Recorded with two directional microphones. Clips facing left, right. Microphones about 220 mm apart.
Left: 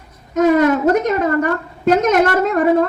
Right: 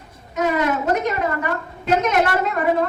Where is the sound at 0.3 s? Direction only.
45° left (ahead or behind).